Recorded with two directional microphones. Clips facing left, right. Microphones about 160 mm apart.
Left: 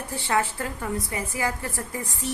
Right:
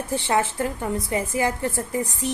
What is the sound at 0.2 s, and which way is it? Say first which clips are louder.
A woman's voice: right 1 dB; 20° right (ahead or behind).